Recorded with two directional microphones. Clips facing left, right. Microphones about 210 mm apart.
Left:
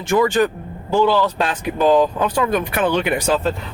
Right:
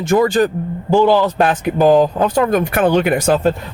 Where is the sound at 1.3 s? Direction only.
50° right (ahead or behind).